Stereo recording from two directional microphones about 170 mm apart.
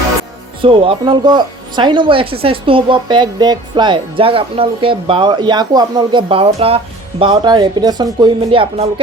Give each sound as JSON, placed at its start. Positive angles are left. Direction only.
{"t": 0.6, "sound": "speech", "side_deg": -30}